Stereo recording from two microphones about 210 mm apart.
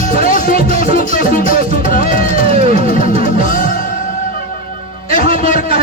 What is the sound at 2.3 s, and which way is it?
Music, 30° right (ahead or behind).